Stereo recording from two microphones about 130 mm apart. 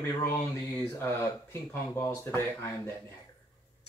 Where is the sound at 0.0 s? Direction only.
20° left (ahead or behind).